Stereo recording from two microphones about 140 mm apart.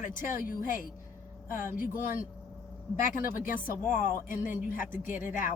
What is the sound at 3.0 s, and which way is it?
Speech, 75° left (ahead or behind).